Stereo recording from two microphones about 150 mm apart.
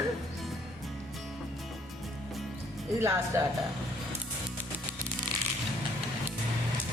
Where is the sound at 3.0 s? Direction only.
15° right (ahead or behind).